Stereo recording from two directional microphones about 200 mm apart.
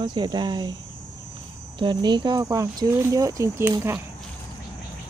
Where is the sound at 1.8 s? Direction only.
20° right (ahead or behind).